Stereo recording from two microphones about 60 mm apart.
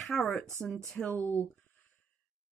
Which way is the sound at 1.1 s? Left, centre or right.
Left.